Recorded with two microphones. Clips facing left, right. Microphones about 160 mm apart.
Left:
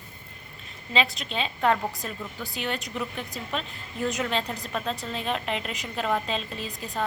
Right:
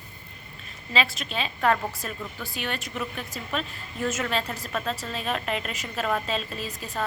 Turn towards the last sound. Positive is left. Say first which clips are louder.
# even
turn(degrees=15)  # may be behind; listen again after turning